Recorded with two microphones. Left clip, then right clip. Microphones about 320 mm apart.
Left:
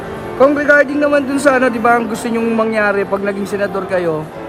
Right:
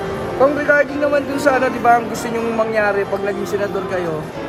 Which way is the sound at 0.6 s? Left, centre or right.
Left.